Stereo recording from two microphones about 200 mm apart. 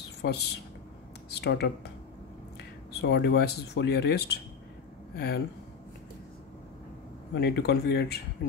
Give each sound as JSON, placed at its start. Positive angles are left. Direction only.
{"t": 0.2, "sound": "speech", "side_deg": 55}
{"t": 3.0, "sound": "speech", "side_deg": 60}
{"t": 7.3, "sound": "speech", "side_deg": 55}